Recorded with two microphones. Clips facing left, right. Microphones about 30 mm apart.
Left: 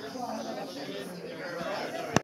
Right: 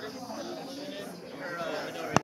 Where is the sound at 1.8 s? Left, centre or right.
Centre.